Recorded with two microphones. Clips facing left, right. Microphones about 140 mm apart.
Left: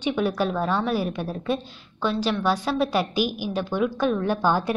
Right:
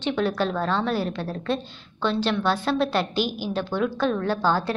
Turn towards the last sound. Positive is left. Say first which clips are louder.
# left 1 dB
turn(degrees=15)  # may be behind; listen again after turning